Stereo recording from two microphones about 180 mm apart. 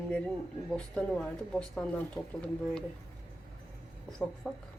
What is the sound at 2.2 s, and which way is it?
Speech, 20° left (ahead or behind).